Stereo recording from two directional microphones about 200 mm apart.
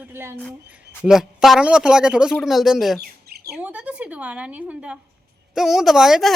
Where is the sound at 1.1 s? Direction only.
Centre (ahead or behind).